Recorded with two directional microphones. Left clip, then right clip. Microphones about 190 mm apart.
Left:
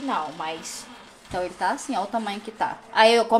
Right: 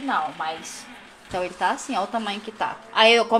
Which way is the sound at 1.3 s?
15° left (ahead or behind).